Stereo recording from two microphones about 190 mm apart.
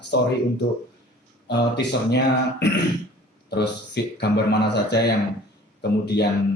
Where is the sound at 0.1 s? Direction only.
60° left (ahead or behind).